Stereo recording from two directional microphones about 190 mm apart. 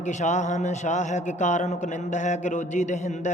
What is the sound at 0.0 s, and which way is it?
A man's voice, 40° left (ahead or behind).